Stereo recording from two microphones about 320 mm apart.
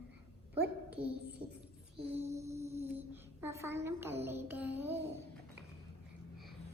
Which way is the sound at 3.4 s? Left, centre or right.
Centre.